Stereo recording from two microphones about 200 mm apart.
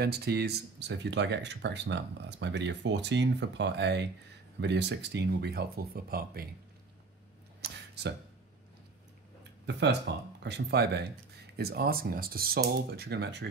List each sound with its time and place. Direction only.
0.0 s speech: 55° right (ahead or behind)
7.6 s a sound: 55° right (ahead or behind)
10.1 s speech: 60° right (ahead or behind)